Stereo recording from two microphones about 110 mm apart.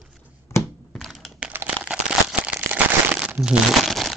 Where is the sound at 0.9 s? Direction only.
Centre (ahead or behind).